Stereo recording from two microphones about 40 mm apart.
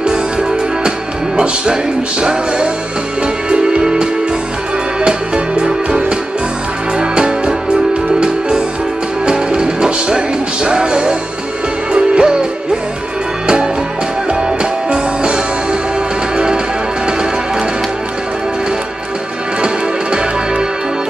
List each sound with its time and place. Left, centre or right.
0.0 s music: right
14.6 s music: right
19.6 s music: right